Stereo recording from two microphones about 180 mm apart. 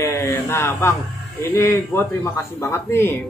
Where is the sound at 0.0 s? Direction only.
15° left (ahead or behind).